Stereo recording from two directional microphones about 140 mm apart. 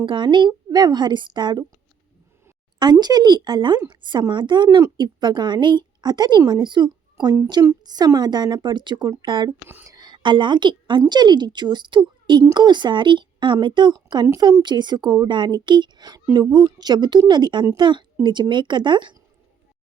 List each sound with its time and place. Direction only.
0.0 s a woman's voice: 35° right (ahead or behind)
2.7 s a woman's voice: 30° right (ahead or behind)
9.6 s speech: 15° right (ahead or behind)
10.0 s a woman's voice: 35° right (ahead or behind)